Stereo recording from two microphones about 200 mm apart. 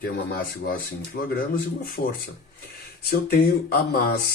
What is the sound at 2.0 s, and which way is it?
Speech, 50° left (ahead or behind).